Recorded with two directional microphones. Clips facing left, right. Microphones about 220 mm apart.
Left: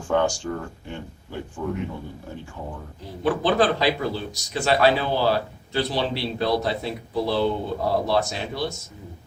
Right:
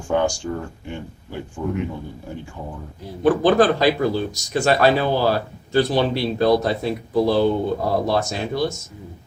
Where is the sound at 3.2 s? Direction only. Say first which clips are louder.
Right 5 dB; 45° right (ahead or behind).